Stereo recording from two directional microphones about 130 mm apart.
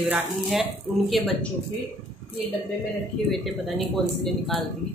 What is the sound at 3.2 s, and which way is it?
Speech, centre (ahead or behind).